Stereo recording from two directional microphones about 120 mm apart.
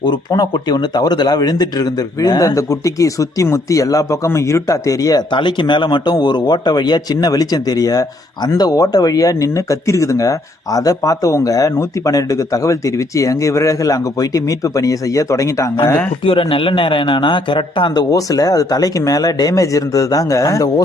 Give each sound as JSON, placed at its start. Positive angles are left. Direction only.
{"t": 0.0, "sound": "speech", "side_deg": 35}
{"t": 16.2, "sound": "a man's voice", "side_deg": 45}
{"t": 18.1, "sound": "speech", "side_deg": 30}